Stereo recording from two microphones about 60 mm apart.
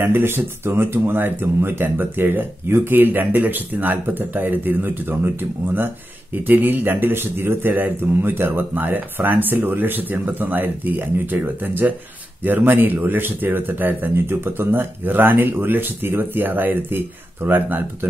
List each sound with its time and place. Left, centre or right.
0.0 s speech: right